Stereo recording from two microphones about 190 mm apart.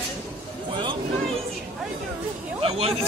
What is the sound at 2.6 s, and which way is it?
Speech, 30° right (ahead or behind).